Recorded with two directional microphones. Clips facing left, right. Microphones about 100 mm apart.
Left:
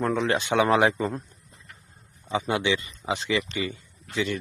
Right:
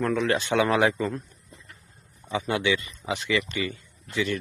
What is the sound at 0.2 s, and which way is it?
Speech, 20° left (ahead or behind).